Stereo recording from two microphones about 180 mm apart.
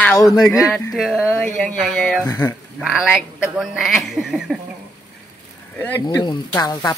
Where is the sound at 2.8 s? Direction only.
5° right (ahead or behind).